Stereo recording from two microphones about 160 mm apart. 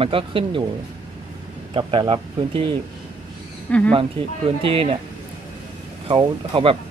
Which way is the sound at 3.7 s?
10° left (ahead or behind).